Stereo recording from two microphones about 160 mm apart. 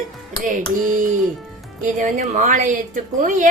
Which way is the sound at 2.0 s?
50° right (ahead or behind).